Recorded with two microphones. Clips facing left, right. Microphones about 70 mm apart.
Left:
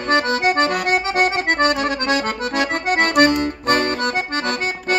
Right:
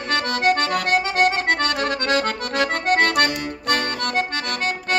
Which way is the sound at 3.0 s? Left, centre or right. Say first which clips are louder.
Left 4 dB; left.